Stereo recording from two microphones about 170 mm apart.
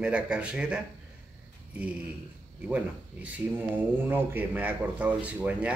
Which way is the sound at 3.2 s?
10° right (ahead or behind).